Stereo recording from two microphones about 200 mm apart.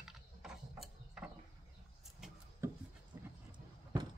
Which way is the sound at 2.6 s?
10° right (ahead or behind).